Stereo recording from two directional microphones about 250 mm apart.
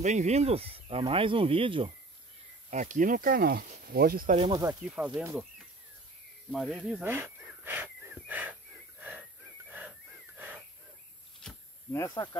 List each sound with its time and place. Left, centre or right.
0.0 s speech: right
4.4 s speech: centre
6.5 s wheeze: centre
9.7 s wheeze: centre
11.3 s a sound: centre